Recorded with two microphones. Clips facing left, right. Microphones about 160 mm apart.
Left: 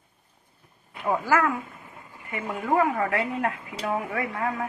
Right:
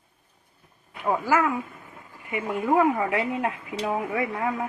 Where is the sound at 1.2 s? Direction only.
15° right (ahead or behind).